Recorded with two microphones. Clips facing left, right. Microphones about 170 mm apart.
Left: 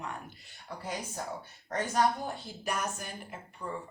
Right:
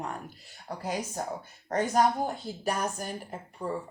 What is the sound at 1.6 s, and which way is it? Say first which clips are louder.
A woman's voice: right 4 dB; 45° right (ahead or behind).